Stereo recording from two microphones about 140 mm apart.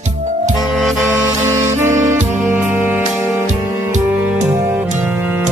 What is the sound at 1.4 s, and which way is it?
Saxophone, 20° right (ahead or behind).